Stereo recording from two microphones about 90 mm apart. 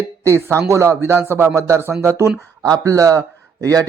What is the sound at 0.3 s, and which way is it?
A man's voice, 30° right (ahead or behind).